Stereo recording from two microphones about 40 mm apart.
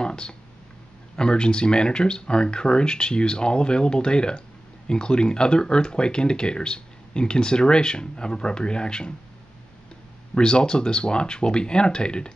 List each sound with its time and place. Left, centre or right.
0.0 s a sound: left
1.1 s speech: left
10.3 s speech: left